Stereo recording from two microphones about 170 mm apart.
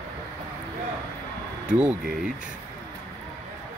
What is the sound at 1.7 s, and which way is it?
Speech, 5° right (ahead or behind).